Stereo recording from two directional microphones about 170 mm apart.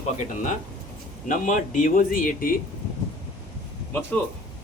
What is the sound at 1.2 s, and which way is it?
A man's voice, 50° left (ahead or behind).